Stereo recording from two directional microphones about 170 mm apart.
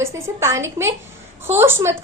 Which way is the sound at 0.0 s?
15° right (ahead or behind).